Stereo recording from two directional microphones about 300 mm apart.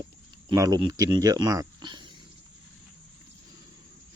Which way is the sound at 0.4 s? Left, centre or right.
Centre.